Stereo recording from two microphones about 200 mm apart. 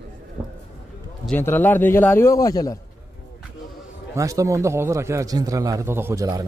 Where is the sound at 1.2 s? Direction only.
10° left (ahead or behind).